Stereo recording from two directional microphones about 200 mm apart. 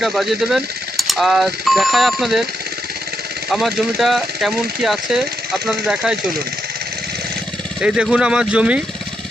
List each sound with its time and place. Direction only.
0.0 s speech: centre (ahead or behind)
3.5 s speech: centre (ahead or behind)
7.8 s speech: 5° right (ahead or behind)